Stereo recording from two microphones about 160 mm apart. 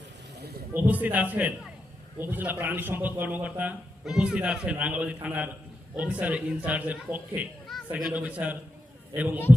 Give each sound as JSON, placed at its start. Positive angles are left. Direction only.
{"t": 0.7, "sound": "a man's voice", "side_deg": -10}
{"t": 7.7, "sound": "a sound", "side_deg": 0}
{"t": 8.2, "sound": "a man's voice", "side_deg": -10}